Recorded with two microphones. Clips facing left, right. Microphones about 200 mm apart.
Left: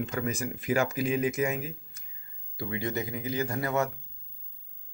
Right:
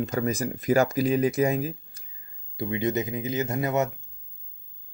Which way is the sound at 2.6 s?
20° right (ahead or behind).